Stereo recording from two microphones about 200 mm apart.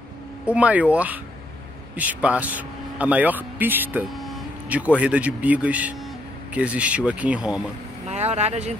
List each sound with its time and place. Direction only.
0.5 s speech: 5° right (ahead or behind)
8.1 s speech: 35° right (ahead or behind)